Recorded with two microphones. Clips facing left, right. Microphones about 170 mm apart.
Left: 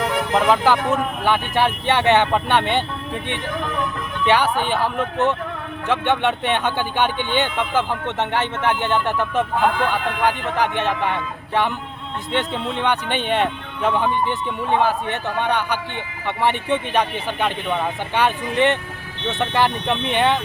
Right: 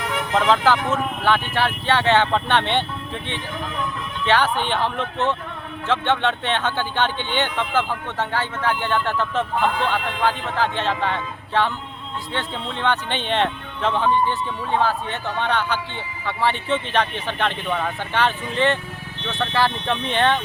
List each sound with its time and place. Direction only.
0.3 s speech: 15° left (ahead or behind)
4.3 s speech: 10° left (ahead or behind)